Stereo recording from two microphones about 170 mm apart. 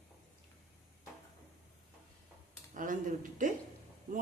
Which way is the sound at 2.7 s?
50° right (ahead or behind).